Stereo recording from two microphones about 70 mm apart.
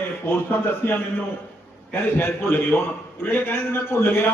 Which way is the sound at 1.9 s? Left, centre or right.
Left.